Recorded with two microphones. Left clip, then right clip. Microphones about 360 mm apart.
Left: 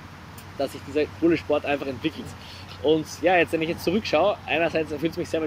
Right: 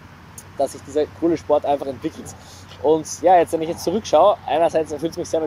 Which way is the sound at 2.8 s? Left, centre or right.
Right.